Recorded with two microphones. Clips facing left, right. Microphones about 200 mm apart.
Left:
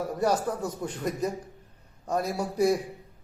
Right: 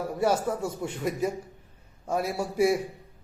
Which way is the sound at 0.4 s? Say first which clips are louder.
Right 1 dB; 25° right (ahead or behind).